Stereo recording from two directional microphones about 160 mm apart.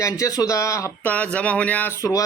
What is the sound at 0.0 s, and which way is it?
Speech, 20° left (ahead or behind).